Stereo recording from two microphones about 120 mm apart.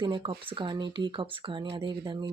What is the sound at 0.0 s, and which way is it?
Speech, 45° right (ahead or behind).